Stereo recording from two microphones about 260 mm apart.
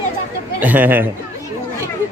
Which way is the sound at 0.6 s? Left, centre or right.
Centre.